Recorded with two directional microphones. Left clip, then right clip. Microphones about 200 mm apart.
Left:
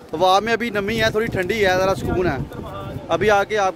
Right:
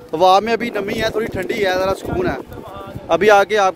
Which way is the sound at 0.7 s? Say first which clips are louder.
Even; 5° left (ahead or behind).